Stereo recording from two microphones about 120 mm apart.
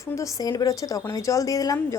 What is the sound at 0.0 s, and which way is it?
A woman's voice, 25° left (ahead or behind).